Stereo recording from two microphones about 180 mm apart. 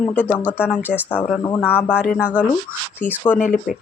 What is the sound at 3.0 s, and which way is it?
Speech, 10° left (ahead or behind).